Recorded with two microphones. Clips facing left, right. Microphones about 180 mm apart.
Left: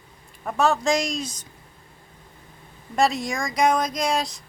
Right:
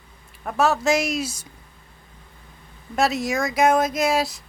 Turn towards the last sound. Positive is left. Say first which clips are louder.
# right 3 dB
turn(degrees=-5)  # may be behind; listen again after turning